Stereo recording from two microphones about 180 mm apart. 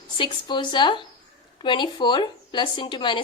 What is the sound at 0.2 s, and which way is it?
A woman's voice, 25° left (ahead or behind).